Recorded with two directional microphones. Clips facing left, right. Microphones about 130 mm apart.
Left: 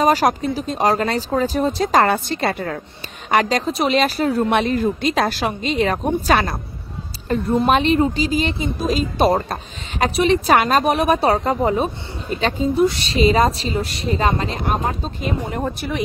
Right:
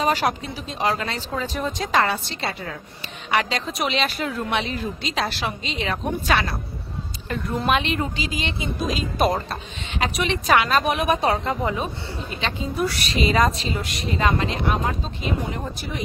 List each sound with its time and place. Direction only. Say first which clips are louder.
0.0 s speech: left 6 dB; 40° left (ahead or behind)
4.5 s speech: left 8 dB; 50° left (ahead or behind)
7.2 s speech: left 6 dB; 30° left (ahead or behind)
12.7 s speech: left 7 dB; 25° left (ahead or behind); by 16.0 s 60° left (ahead or behind)